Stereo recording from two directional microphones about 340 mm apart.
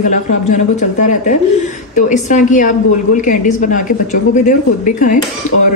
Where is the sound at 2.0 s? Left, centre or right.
Left.